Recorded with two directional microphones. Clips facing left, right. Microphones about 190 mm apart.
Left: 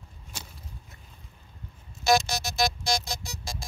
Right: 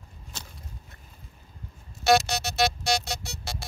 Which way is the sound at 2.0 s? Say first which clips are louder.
Right 2 dB; 65° right (ahead or behind).